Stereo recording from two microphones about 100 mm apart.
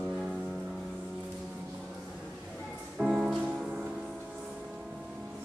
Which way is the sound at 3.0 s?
10° right (ahead or behind).